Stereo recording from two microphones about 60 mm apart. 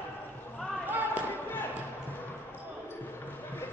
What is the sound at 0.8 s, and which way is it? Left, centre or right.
Basketball bounce, right.